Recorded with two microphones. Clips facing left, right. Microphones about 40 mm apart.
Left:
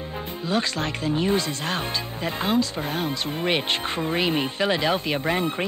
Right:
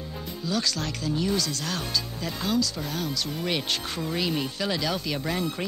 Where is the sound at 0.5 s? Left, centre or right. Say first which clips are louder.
Left 3 dB; left.